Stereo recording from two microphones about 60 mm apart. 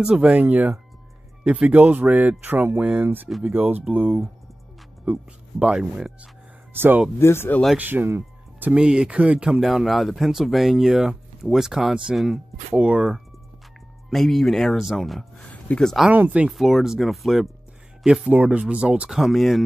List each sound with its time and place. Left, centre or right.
0.0 s speech: centre
0.3 s speech: right
5.0 s speech: right
6.7 s speech: right
7.2 s speech: left
7.7 s speech: right
8.7 s speech: centre
9.6 s speech: centre
14.1 s speech: centre
15.7 s speech: left
16.1 s speech: right
16.4 s speech: centre
18.2 s speech: right
19.0 s speech: centre